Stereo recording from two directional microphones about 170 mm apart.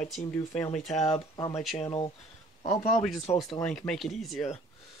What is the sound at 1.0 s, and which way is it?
Speech, 30° left (ahead or behind).